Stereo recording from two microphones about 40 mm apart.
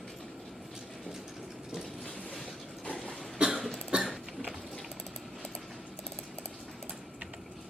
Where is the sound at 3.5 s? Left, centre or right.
Centre.